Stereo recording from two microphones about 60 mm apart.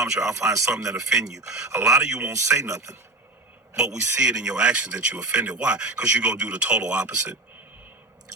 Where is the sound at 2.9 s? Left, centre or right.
Right.